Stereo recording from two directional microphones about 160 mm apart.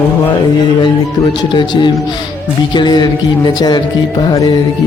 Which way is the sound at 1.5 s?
30° left (ahead or behind).